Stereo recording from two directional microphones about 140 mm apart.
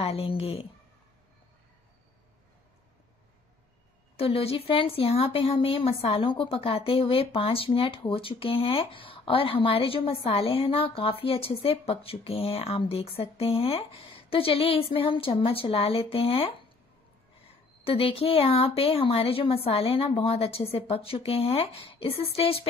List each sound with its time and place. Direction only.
0.0 s speech: 45° left (ahead or behind)
4.2 s a woman's voice: 45° left (ahead or behind)
17.8 s speech: 40° left (ahead or behind)